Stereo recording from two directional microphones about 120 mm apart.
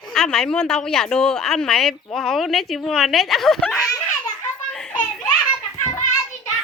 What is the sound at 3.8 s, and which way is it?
Giggle, 25° left (ahead or behind).